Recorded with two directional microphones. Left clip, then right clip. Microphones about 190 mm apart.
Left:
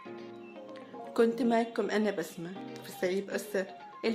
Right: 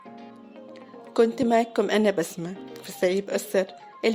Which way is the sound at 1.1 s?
30° right (ahead or behind).